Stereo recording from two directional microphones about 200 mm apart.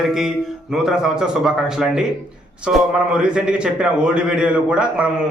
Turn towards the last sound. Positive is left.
turn(degrees=-5)  # may be behind; listen again after turning